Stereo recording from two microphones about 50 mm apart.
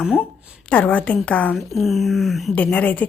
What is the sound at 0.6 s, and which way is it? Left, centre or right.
Speech, left.